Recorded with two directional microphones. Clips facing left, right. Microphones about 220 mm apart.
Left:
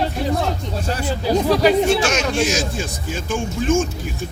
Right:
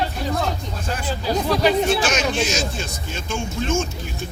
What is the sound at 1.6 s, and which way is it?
Speech, 5° right (ahead or behind).